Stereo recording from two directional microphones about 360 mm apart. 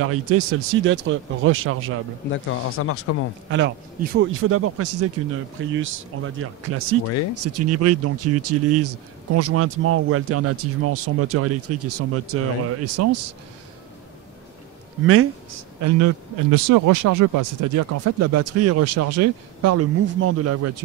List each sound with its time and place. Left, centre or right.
0.0 s speech: right
2.3 s speech: left
3.4 s speech: right
15.0 s speech: right
16.5 s speech: right